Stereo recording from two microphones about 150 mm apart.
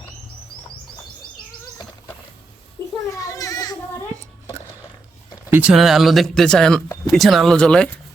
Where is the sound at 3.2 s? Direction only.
20° left (ahead or behind).